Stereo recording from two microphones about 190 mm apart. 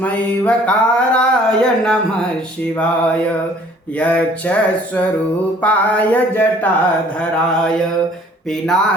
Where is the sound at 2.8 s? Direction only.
5° left (ahead or behind).